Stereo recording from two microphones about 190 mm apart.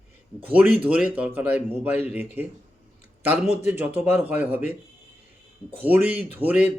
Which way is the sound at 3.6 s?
10° right (ahead or behind).